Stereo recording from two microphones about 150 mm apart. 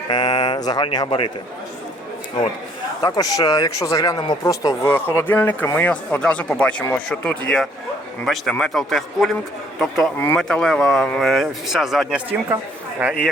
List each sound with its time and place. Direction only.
0.1 s speech: 30° left (ahead or behind)
3.0 s speech: 25° left (ahead or behind); by 13.3 s 5° right (ahead or behind)